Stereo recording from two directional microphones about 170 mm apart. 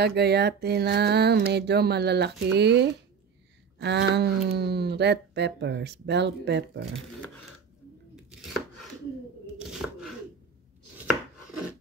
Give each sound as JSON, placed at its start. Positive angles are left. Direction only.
{"t": 0.0, "sound": "a sound", "side_deg": -75}
{"t": 3.7, "sound": "speech", "side_deg": -90}
{"t": 8.3, "sound": "chopping", "side_deg": 0}